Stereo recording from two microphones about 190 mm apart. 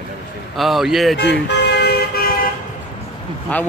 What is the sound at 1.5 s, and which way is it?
Vehicle, 60° left (ahead or behind).